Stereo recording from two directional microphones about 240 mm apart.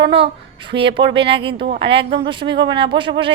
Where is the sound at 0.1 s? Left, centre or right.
Right.